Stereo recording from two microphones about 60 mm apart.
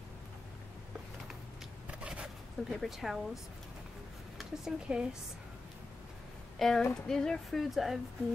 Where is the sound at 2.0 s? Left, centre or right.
Centre.